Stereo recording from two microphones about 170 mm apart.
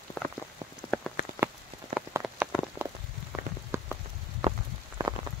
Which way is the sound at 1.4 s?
10° right (ahead or behind).